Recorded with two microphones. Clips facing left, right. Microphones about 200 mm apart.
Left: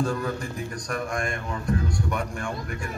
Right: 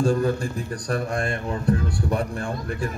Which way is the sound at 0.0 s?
30° right (ahead or behind).